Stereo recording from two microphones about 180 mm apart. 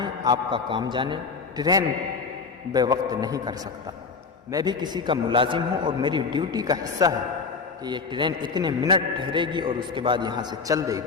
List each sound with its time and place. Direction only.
0.0 s a man's voice: 25° right (ahead or behind)
4.5 s a man's voice: 25° right (ahead or behind)